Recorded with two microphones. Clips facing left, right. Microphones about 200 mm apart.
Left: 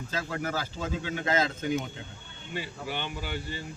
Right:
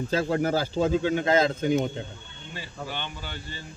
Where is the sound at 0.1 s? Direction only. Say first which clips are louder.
Right 8 dB; 30° right (ahead or behind).